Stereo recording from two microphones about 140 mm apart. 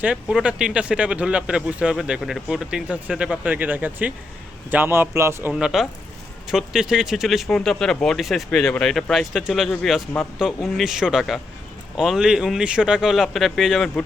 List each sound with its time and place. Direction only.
0.0 s speech: 5° right (ahead or behind)